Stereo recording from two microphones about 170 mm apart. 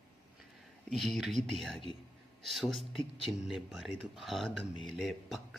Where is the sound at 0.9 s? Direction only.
Centre (ahead or behind).